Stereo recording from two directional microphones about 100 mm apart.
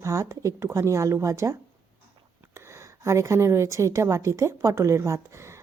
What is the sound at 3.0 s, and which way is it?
A woman's voice, 30° right (ahead or behind).